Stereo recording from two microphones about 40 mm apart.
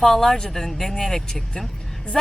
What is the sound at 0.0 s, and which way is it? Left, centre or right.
Speech, centre.